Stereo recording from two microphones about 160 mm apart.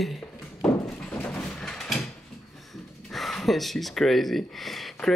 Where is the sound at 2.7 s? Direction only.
Centre (ahead or behind).